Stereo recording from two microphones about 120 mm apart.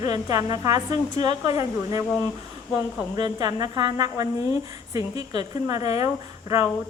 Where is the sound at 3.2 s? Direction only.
35° right (ahead or behind).